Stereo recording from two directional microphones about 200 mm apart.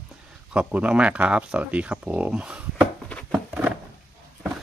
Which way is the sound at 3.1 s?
5° left (ahead or behind).